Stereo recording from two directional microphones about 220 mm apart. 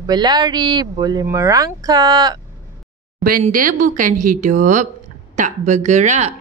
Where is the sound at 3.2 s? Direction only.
40° right (ahead or behind).